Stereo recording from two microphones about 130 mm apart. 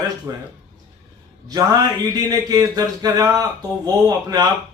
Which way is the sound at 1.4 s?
30° right (ahead or behind).